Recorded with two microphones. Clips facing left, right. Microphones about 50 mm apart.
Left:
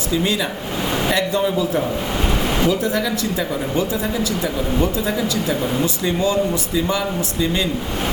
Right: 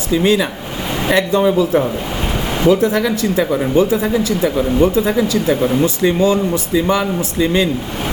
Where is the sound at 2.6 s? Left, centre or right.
Right.